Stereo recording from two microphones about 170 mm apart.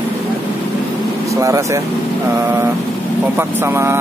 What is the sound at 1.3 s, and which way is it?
Speech, 20° right (ahead or behind).